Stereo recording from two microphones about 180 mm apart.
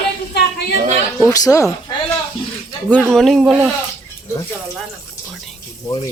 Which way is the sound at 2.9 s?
5° left (ahead or behind).